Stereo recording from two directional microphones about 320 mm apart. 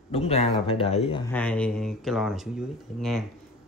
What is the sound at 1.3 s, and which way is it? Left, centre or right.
Speech, centre.